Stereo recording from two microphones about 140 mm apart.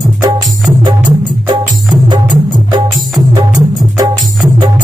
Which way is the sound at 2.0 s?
30° right (ahead or behind).